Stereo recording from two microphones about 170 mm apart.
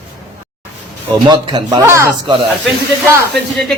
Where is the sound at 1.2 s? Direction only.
25° right (ahead or behind).